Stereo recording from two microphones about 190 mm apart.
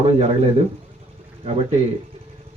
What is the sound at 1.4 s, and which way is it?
Speech, 30° right (ahead or behind).